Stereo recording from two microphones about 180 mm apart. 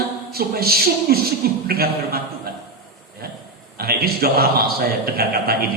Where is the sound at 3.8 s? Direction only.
55° right (ahead or behind).